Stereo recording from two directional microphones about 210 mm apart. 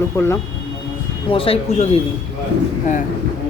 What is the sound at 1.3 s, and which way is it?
Speech, 25° left (ahead or behind).